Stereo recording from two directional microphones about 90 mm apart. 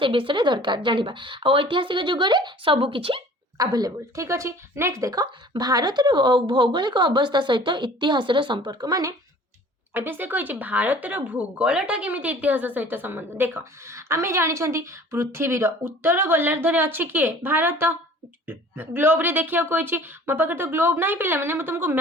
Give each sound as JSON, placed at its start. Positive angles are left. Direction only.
{"t": 0.0, "sound": "a woman's voice", "side_deg": -75}
{"t": 3.6, "sound": "a woman's voice", "side_deg": -45}
{"t": 5.2, "sound": "a woman's voice", "side_deg": -50}
{"t": 9.9, "sound": "speech", "side_deg": -25}